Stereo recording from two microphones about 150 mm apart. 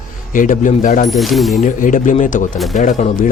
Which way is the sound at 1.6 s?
60° left (ahead or behind).